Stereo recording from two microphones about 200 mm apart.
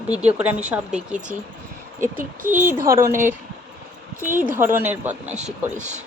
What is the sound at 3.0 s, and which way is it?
Speech, 10° right (ahead or behind).